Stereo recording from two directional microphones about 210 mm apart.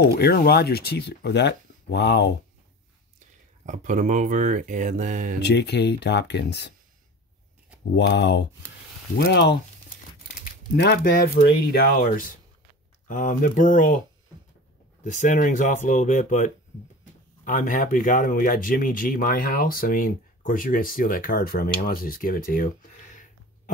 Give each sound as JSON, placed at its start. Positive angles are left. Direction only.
{"t": 0.2, "sound": "speech", "side_deg": 50}
{"t": 3.6, "sound": "speech", "side_deg": -35}
{"t": 5.4, "sound": "speech", "side_deg": 50}
{"t": 7.9, "sound": "speech", "side_deg": 55}
{"t": 10.8, "sound": "speech", "side_deg": 45}
{"t": 15.0, "sound": "speech", "side_deg": 35}